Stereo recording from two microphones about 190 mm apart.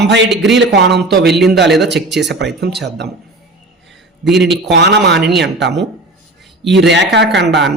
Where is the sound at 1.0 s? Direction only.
Centre (ahead or behind).